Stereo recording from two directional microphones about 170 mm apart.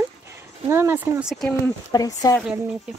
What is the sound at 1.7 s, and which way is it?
Speech, 20° left (ahead or behind).